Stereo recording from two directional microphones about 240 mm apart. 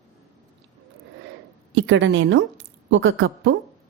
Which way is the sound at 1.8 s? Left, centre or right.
Right.